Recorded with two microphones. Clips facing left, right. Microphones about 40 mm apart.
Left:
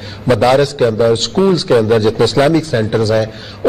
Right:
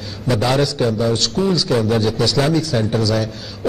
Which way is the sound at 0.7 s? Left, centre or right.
Left.